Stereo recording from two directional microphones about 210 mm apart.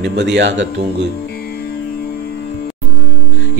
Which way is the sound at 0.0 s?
55° right (ahead or behind).